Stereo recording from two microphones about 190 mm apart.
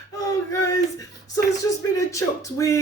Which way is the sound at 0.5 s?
15° left (ahead or behind).